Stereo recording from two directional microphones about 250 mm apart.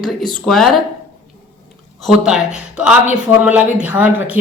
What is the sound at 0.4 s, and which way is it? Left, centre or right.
Speech, centre.